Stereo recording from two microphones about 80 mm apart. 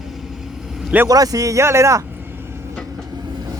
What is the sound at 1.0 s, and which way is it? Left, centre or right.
Speech, right.